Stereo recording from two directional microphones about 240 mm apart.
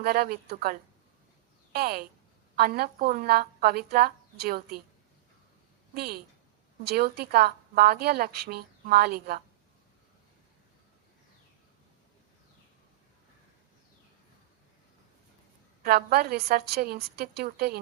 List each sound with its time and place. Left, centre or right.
0.0 s a woman's voice: right
5.9 s a woman's voice: right
15.8 s a woman's voice: right